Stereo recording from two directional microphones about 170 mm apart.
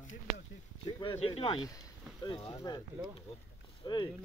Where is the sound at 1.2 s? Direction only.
35° left (ahead or behind).